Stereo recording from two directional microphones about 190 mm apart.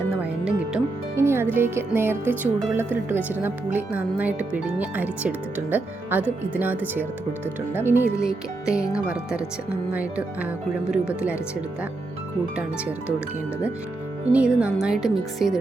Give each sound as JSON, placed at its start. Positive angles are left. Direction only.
{"t": 0.2, "sound": "speech", "side_deg": -5}
{"t": 14.3, "sound": "speech", "side_deg": -5}